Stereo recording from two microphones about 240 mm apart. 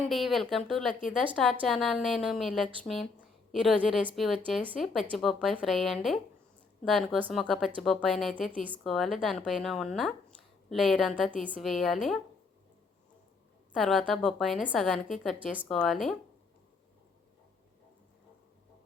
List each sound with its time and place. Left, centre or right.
0.1 s a woman's voice: centre
13.7 s a woman's voice: centre